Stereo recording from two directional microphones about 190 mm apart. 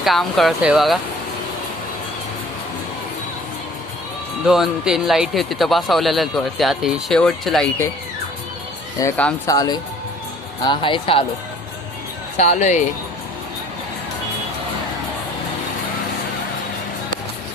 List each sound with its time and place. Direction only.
0.0 s speech: centre (ahead or behind)
4.4 s speech: centre (ahead or behind)
9.0 s speech: 10° left (ahead or behind); by 11.2 s 30° left (ahead or behind)
12.4 s speech: 35° left (ahead or behind)